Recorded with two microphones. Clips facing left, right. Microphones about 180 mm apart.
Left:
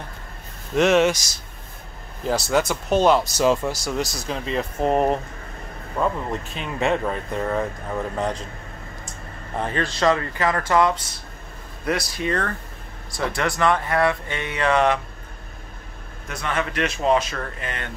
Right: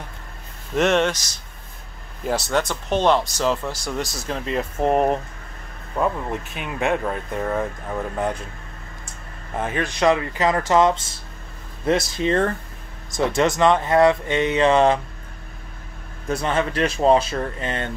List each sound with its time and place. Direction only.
0.7 s speech: centre (ahead or behind)
4.8 s speech: 10° right (ahead or behind)
9.6 s speech: 10° right (ahead or behind); by 15.0 s 25° right (ahead or behind)
16.3 s speech: 30° right (ahead or behind)